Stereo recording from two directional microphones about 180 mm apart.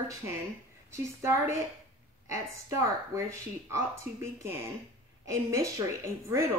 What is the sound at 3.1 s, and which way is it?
Speech, 15° right (ahead or behind).